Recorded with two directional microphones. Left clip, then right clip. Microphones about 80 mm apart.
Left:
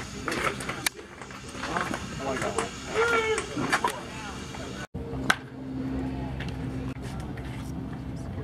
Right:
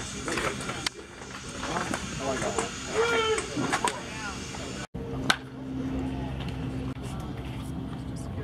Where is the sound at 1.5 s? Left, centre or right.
Left.